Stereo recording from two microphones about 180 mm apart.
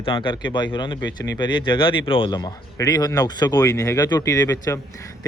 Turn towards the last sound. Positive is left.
turn(degrees=15)  # may be behind; listen again after turning